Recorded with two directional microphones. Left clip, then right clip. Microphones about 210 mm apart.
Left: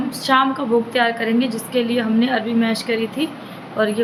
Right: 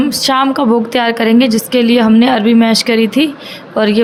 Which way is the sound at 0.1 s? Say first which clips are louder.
Right 5 dB; 50° right (ahead or behind).